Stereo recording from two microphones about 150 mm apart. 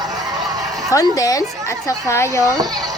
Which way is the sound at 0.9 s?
25° left (ahead or behind).